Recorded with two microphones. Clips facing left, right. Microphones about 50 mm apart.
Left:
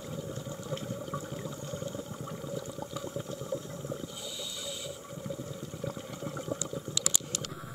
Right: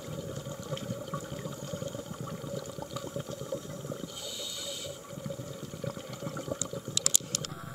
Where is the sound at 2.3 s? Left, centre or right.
Centre.